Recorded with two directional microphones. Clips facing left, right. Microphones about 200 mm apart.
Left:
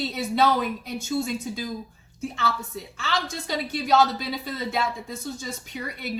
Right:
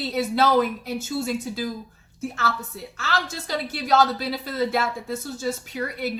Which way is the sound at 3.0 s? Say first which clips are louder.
Right 1 dB; 5° right (ahead or behind).